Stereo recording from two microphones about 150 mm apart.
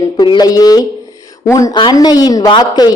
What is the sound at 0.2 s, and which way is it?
Speech, 30° left (ahead or behind).